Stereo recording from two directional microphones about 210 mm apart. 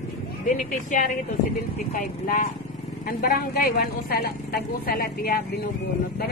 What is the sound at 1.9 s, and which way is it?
A woman's voice, 40° left (ahead or behind).